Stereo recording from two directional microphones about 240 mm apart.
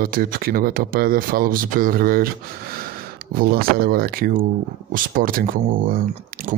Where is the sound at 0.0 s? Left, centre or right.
Right.